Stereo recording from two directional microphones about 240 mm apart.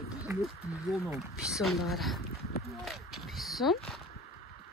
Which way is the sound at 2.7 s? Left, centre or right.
Centre.